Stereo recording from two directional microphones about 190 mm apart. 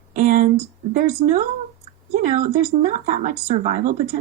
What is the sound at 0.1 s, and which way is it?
Speech, 40° right (ahead or behind).